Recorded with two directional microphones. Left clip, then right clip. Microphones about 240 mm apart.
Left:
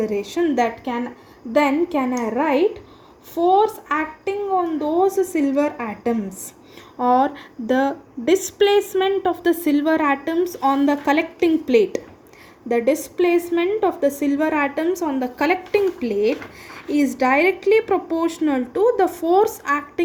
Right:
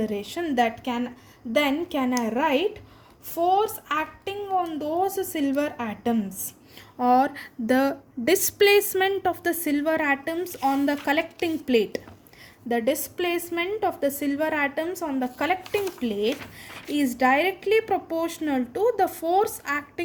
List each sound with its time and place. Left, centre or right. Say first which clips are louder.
0.0 s a woman's voice: left 8 dB; right